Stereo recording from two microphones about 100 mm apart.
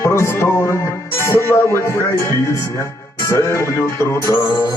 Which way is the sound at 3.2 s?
30° left (ahead or behind).